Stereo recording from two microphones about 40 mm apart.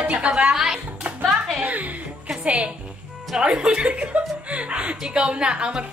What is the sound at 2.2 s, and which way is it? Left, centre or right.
A woman's voice, right.